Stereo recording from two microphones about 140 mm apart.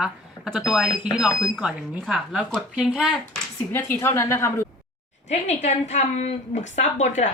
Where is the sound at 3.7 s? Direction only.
15° left (ahead or behind).